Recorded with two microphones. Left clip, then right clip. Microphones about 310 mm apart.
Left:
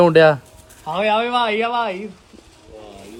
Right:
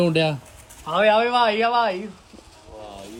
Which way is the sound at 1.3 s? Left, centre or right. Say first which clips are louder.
Even; left.